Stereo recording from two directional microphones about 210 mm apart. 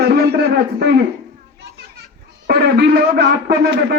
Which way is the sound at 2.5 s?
50° right (ahead or behind).